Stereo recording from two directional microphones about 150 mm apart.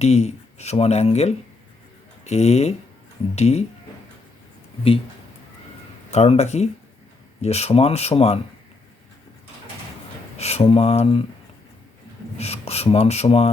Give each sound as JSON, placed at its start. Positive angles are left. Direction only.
{"t": 0.0, "sound": "speech", "side_deg": 45}
{"t": 6.1, "sound": "speech", "side_deg": 45}
{"t": 10.3, "sound": "speech", "side_deg": 45}
{"t": 12.4, "sound": "speech", "side_deg": 45}